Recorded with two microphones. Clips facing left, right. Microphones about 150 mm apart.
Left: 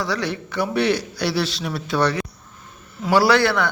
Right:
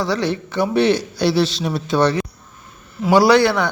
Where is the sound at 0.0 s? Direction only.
25° right (ahead or behind).